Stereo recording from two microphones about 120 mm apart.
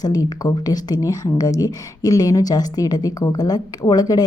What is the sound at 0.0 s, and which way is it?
A woman's voice, 30° left (ahead or behind).